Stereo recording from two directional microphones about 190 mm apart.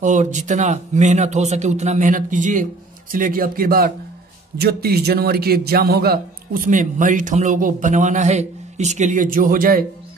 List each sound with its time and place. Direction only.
0.0 s a man's voice: 40° right (ahead or behind)